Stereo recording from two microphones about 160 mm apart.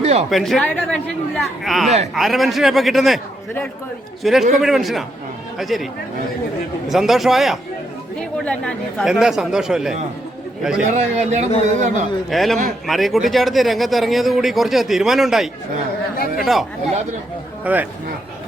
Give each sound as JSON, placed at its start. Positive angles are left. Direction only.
{"t": 0.0, "sound": "a sound", "side_deg": -40}
{"t": 0.3, "sound": "a man's voice", "side_deg": 0}
{"t": 4.2, "sound": "a man's voice", "side_deg": 0}
{"t": 10.9, "sound": "speech", "side_deg": -45}
{"t": 12.3, "sound": "a man's voice", "side_deg": 0}
{"t": 16.1, "sound": "speech", "side_deg": 65}
{"t": 17.6, "sound": "a man's voice", "side_deg": -10}